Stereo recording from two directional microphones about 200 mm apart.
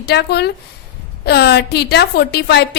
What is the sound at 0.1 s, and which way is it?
A woman's voice, 55° left (ahead or behind).